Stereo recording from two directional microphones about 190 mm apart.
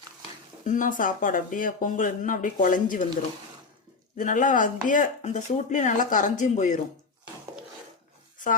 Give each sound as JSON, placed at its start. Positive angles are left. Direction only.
{"t": 0.6, "sound": "speech", "side_deg": 45}
{"t": 4.2, "sound": "speech", "side_deg": 45}